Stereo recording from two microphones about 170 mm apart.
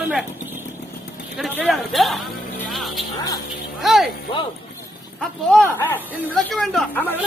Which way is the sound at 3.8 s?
Centre (ahead or behind).